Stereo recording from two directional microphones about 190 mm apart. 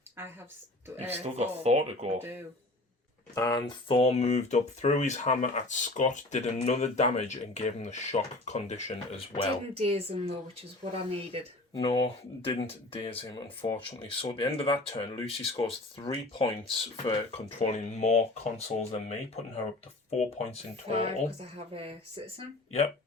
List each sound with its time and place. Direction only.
1.2 s speech: 35° right (ahead or behind)
3.3 s speech: 20° left (ahead or behind)
9.7 s speech: 30° right (ahead or behind)
11.7 s speech: 30° left (ahead or behind)
20.9 s speech: 30° right (ahead or behind)